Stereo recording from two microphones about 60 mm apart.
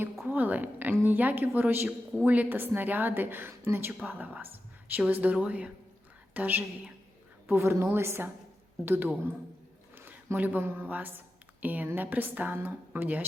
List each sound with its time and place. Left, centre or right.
0.3 s a woman's voice: right
4.0 s a woman's voice: right
7.4 s a woman's voice: right
9.9 s a sound: right
10.3 s a woman's voice: right